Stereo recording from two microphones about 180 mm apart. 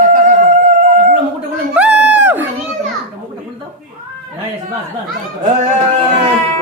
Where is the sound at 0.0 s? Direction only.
45° right (ahead or behind).